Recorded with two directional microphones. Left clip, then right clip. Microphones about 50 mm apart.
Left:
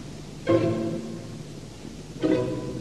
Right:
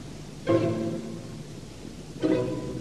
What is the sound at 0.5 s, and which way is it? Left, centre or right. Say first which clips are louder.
Music: left 2 dB; left.